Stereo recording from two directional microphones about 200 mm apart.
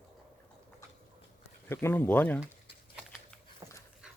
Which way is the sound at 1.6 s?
10° left (ahead or behind).